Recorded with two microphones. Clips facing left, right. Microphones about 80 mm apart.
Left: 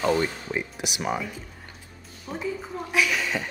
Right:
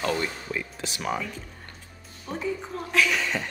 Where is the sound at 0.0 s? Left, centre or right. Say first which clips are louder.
Left 4 dB; centre.